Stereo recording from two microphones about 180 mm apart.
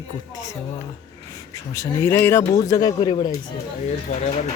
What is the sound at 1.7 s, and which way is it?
Speech, 15° left (ahead or behind).